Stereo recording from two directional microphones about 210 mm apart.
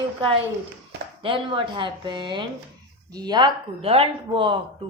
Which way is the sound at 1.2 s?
25° right (ahead or behind).